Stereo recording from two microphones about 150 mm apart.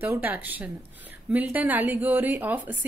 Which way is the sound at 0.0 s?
15° right (ahead or behind).